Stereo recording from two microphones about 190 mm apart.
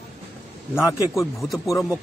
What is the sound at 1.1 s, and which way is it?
Speech, centre (ahead or behind).